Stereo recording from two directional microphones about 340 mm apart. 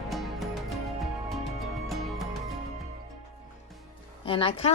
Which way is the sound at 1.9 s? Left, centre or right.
Centre.